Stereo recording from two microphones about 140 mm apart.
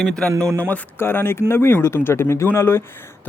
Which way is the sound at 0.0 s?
5° left (ahead or behind).